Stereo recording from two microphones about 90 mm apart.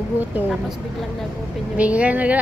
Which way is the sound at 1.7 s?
15° right (ahead or behind).